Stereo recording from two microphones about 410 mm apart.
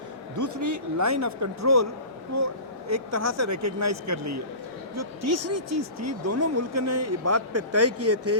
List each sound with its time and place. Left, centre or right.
0.3 s speech: right